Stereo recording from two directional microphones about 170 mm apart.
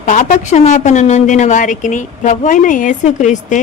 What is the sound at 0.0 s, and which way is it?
A woman's voice, 45° left (ahead or behind).